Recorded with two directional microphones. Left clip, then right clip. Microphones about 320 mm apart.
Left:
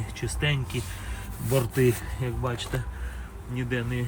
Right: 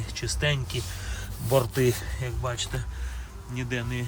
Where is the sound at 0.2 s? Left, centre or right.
Centre.